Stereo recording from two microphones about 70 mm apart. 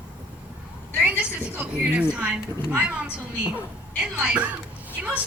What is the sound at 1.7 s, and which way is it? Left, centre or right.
Speech, right.